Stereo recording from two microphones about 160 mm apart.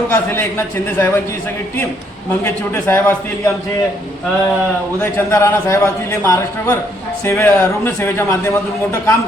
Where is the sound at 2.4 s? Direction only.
15° left (ahead or behind).